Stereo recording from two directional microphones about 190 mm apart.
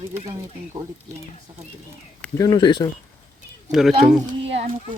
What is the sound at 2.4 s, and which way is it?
Speech, 25° left (ahead or behind).